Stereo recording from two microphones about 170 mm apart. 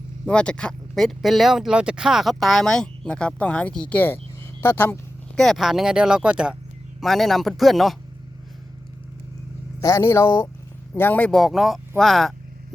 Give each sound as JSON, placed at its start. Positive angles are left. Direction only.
{"t": 0.3, "sound": "speech", "side_deg": 5}
{"t": 5.4, "sound": "speech", "side_deg": 0}
{"t": 9.8, "sound": "speech", "side_deg": 15}